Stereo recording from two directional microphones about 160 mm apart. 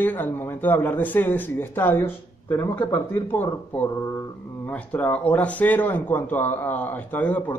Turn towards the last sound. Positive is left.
turn(degrees=10)  # may be behind; listen again after turning